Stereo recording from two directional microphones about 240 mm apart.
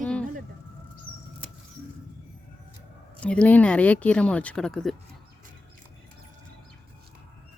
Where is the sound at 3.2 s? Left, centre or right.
Centre.